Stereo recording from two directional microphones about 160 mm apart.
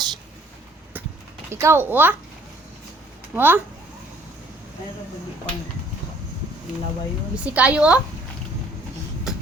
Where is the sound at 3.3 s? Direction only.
10° right (ahead or behind).